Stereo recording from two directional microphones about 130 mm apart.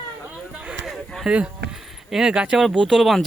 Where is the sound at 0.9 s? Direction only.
Centre (ahead or behind).